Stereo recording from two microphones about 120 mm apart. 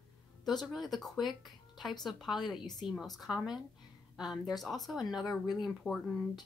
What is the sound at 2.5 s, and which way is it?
Speech, 35° left (ahead or behind).